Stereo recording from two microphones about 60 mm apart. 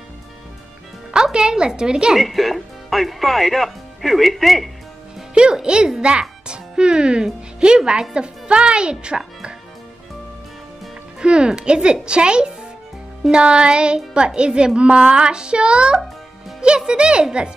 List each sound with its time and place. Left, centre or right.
1.1 s speech: centre
2.1 s speech: centre
5.3 s speech: centre
11.1 s speech: centre